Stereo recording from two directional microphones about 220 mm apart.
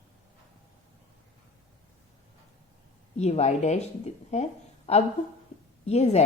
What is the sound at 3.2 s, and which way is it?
Speech, 30° left (ahead or behind).